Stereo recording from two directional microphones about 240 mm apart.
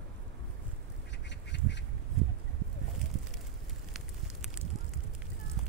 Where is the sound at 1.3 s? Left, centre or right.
Left.